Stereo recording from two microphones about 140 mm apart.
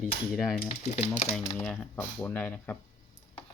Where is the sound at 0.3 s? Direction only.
Centre (ahead or behind).